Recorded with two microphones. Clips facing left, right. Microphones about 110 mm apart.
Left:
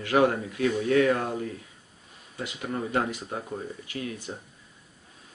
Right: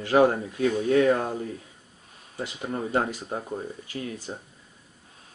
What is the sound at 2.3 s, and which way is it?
Speech, 35° right (ahead or behind).